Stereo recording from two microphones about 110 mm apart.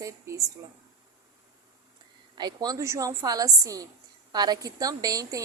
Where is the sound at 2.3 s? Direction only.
40° right (ahead or behind).